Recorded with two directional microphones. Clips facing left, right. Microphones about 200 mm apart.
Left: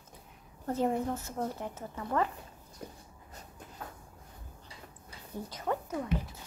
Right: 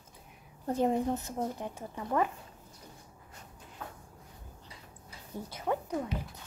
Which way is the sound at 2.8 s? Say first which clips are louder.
Left 9 dB; 60° left (ahead or behind).